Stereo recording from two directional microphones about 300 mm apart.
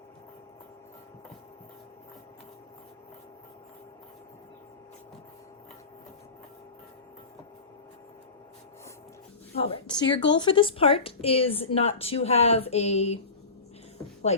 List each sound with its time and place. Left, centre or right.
9.6 s speech: centre